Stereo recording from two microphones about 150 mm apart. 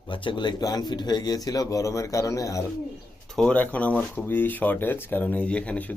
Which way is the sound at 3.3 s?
5° left (ahead or behind).